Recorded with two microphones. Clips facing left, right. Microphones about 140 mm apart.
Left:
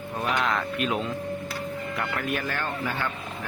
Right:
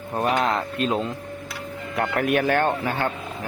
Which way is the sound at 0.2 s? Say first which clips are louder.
Right 4 dB; 45° right (ahead or behind).